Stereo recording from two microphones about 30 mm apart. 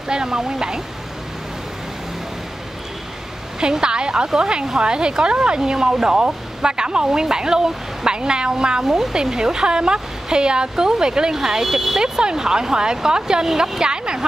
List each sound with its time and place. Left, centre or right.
0.1 s speech: right
3.7 s speech: right
8.8 s speech: centre
9.1 s speech: right
11.6 s speech: centre
12.0 s speech: right